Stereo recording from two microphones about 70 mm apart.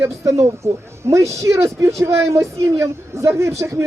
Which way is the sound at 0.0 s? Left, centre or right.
Right.